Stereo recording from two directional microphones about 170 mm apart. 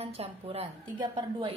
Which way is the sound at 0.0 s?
35° right (ahead or behind).